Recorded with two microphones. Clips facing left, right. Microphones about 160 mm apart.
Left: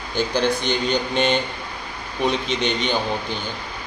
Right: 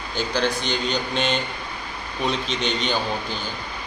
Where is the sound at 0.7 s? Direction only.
55° left (ahead or behind).